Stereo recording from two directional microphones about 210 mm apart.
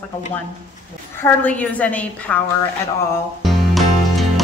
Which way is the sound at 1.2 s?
5° left (ahead or behind).